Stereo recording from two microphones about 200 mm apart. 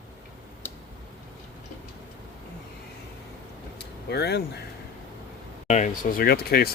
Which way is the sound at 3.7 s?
55° left (ahead or behind).